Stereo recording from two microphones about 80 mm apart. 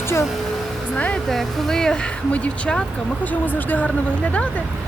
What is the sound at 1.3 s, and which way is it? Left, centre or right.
Speech, centre.